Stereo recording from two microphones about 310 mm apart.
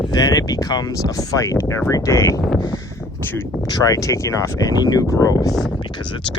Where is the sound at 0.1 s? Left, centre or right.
Centre.